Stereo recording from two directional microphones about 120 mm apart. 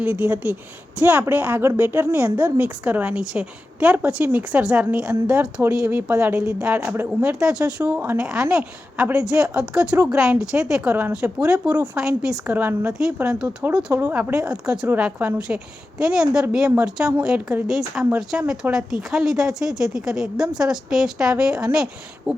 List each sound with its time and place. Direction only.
0.0 s a woman's voice: 10° right (ahead or behind)
7.3 s a woman's voice: 5° right (ahead or behind)
12.5 s a woman's voice: 15° right (ahead or behind)
12.9 s a woman's voice: 5° right (ahead or behind)